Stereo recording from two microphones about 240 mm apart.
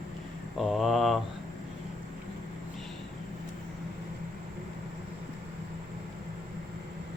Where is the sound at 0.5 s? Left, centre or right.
Centre.